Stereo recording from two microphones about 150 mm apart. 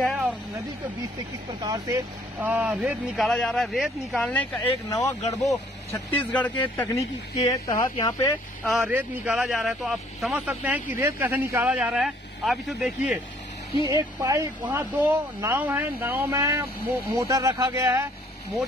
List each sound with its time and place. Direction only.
0.0 s vehicle: centre (ahead or behind)
1.5 s speech: 25° right (ahead or behind)
2.4 s speech: 10° right (ahead or behind)
3.2 s speech: centre (ahead or behind)
4.9 s speech: 20° left (ahead or behind)
8.6 s speech: centre (ahead or behind)
14.6 s speech: 10° right (ahead or behind)